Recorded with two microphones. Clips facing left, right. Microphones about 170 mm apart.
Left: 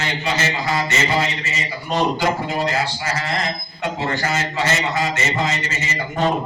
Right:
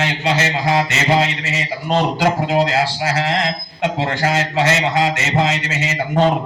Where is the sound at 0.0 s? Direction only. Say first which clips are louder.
Right 4 dB; 70° right (ahead or behind).